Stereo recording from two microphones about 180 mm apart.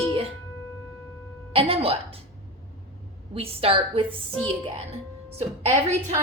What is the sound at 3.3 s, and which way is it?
A woman's voice, 35° right (ahead or behind).